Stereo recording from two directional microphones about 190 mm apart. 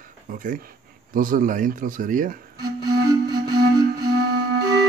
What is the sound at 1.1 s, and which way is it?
Speech, 45° right (ahead or behind).